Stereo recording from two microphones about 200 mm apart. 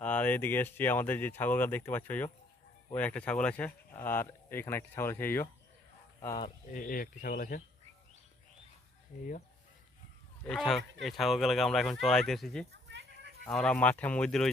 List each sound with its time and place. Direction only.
0.0 s speech: 10° left (ahead or behind)
6.7 s speech: 45° left (ahead or behind)
9.1 s speech: 40° left (ahead or behind)
10.4 s speech: 5° left (ahead or behind)
12.7 s goat: 60° right (ahead or behind)
13.4 s speech: 5° left (ahead or behind)